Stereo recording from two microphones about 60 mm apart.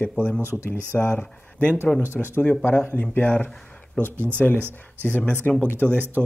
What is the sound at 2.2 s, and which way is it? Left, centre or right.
Speech, centre.